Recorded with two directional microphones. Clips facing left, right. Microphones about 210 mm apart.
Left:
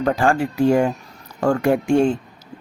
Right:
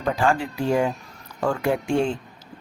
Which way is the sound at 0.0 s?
50° left (ahead or behind).